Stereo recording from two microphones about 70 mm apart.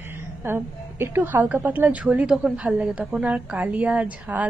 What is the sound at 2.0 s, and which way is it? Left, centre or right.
A woman's voice, centre.